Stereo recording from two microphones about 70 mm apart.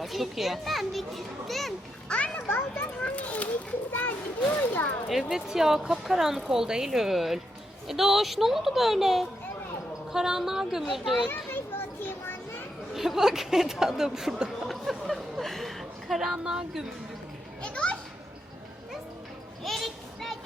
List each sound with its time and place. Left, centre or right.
0.0 s a woman's voice: centre
2.0 s a child's voice: centre
2.5 s a child's voice: left
3.0 s children playing: centre
4.7 s a sound: left
5.0 s a woman's voice: centre
12.0 s children playing: left
12.9 s speech: centre
14.7 s a sound: centre
17.6 s children playing: centre
19.6 s children playing: centre